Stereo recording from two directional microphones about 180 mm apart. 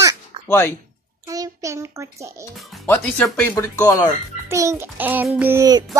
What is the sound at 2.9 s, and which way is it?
Speech, 10° left (ahead or behind).